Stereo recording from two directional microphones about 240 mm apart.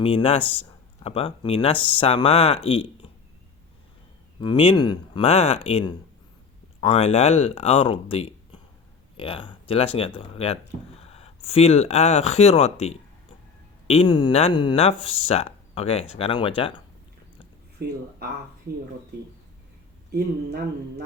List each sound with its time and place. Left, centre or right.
0.0 s speech: left
4.4 s speech: left
20.1 s speech: right